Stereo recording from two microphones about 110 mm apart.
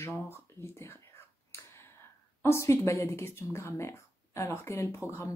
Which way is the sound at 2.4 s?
25° left (ahead or behind).